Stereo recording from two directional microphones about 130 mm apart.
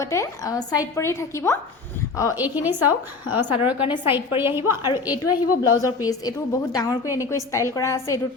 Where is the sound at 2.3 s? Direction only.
15° right (ahead or behind).